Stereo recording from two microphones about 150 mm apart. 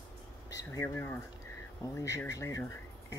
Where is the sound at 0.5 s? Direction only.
20° left (ahead or behind).